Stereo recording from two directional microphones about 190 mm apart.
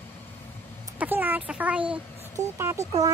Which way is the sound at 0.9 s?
10° right (ahead or behind).